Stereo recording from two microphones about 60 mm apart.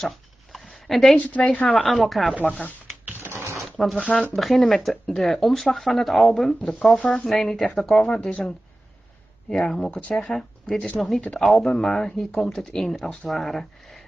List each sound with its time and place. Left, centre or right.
0.0 s a sound: centre
1.1 s speech: left
1.8 s speech: centre
3.3 s a sound: right
4.0 s speech: centre
4.4 s speech: centre
7.0 s speech: left
7.2 s speech: centre
8.0 s speech: centre